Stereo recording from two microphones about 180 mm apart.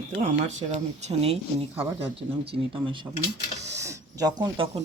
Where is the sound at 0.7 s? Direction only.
35° right (ahead or behind).